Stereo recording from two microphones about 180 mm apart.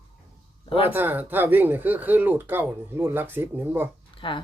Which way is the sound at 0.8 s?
10° right (ahead or behind).